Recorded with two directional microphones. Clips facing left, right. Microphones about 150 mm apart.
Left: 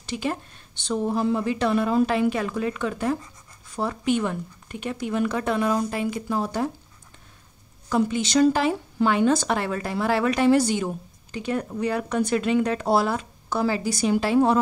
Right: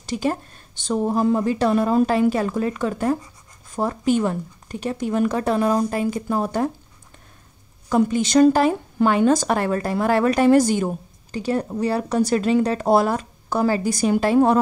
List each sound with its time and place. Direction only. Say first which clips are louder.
0.0 s a woman's voice: right 5 dB; 40° right (ahead or behind)
7.9 s speech: right 4 dB; 45° right (ahead or behind)